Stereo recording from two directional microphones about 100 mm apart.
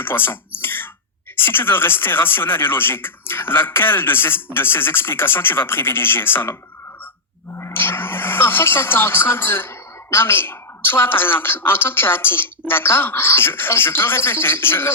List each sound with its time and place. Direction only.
0.0 s speech: 20° left (ahead or behind)
0.6 s throat clearing: 20° left (ahead or behind)
1.4 s speech: 20° left (ahead or behind)
7.6 s speech: 20° left (ahead or behind)